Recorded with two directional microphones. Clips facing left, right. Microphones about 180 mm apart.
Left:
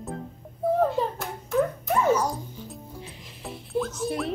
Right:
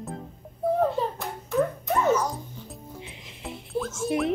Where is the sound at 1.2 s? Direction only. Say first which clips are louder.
Left 1 dB; centre (ahead or behind).